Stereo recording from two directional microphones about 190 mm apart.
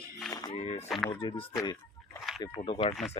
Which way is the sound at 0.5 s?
30° left (ahead or behind).